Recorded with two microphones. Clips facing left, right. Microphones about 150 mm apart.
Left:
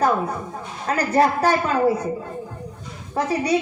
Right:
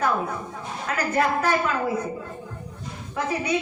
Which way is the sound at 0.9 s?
35° left (ahead or behind).